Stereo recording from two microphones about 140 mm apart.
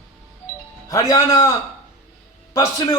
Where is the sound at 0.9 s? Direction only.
25° left (ahead or behind).